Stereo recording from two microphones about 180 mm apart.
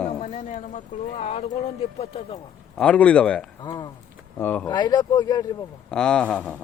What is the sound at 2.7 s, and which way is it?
Speech, 5° left (ahead or behind).